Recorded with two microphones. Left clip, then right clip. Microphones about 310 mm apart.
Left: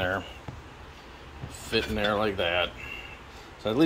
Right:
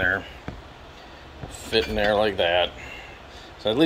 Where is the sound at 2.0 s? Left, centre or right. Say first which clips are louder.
Right 6 dB; left.